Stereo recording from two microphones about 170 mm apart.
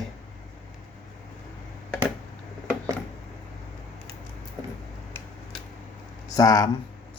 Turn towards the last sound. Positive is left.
turn(degrees=20)  # may be behind; listen again after turning